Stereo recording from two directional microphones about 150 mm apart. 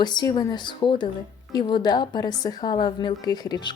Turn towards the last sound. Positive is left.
turn(degrees=30)  # may be behind; listen again after turning